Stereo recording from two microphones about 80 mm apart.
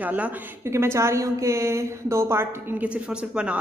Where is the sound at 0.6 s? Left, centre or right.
Right.